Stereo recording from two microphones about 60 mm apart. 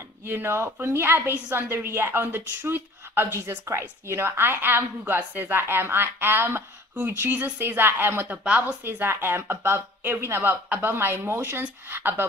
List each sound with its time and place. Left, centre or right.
0.3 s speech: right
7.6 s speech: right
8.3 s speech: right
9.0 s speech: right